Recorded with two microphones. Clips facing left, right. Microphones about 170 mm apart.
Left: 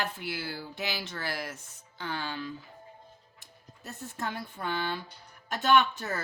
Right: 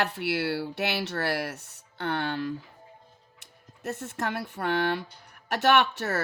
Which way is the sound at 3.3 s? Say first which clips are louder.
Even; 75° right (ahead or behind).